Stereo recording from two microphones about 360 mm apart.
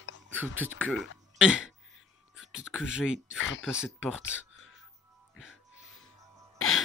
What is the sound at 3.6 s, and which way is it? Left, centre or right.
Speech, centre.